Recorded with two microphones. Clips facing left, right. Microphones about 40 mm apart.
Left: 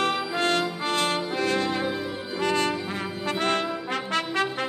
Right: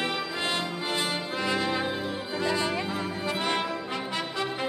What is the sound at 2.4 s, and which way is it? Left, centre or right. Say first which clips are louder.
Music: left 4 dB; left.